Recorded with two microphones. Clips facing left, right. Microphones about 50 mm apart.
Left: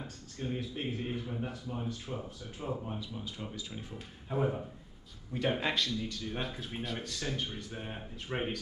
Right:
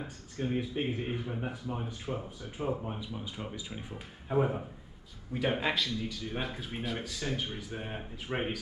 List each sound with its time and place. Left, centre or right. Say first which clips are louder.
0.0 s speech: right 4 dB; centre